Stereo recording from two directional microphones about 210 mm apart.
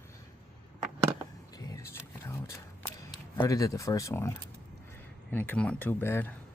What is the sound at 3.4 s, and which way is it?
Speech, 15° left (ahead or behind).